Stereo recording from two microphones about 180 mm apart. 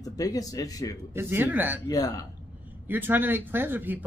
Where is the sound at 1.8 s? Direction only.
20° left (ahead or behind).